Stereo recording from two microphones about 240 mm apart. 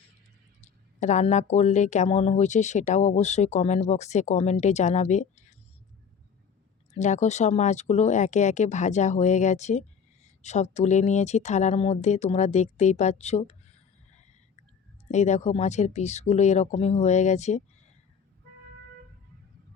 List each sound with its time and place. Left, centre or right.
0.6 s speech: left
6.9 s speech: left
15.1 s speech: left